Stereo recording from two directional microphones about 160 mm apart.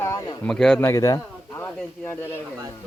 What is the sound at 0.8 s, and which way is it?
Speech, 20° left (ahead or behind).